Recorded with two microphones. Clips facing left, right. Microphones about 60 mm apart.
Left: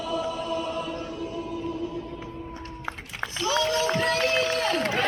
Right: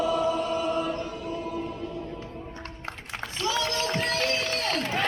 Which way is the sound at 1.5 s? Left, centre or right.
Right.